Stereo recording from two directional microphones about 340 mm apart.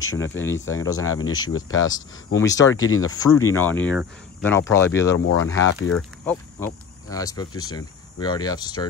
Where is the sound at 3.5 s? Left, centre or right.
Centre.